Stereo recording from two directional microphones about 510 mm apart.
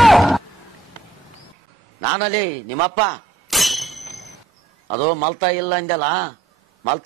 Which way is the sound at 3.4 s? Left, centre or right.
Centre.